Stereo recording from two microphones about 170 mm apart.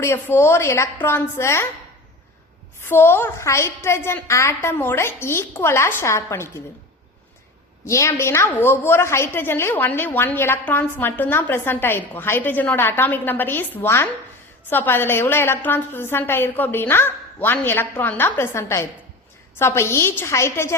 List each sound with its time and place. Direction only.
0.0 s a woman's voice: 15° left (ahead or behind)
2.8 s a woman's voice: 15° left (ahead or behind)
7.9 s a woman's voice: 15° left (ahead or behind)